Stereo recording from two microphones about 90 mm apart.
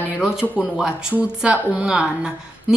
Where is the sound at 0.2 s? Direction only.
10° right (ahead or behind).